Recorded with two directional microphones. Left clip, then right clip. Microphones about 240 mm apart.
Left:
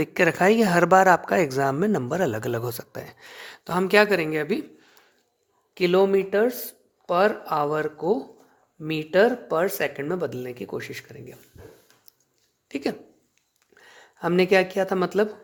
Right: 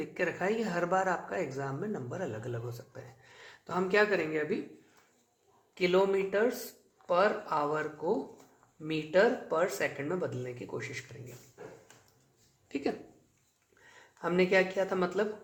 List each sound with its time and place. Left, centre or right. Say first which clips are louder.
0.0 s speech: left 13 dB; left
5.7 s speech: left 8 dB; left
12.6 s speech: left 6 dB; left
13.8 s speech: left 8 dB; left